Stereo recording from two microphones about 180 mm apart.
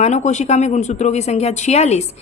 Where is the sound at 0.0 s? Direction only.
40° left (ahead or behind).